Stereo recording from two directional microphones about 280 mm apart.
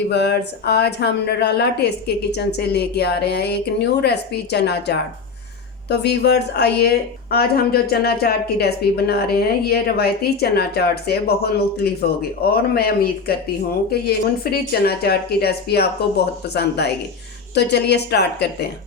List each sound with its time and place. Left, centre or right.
0.1 s speech: left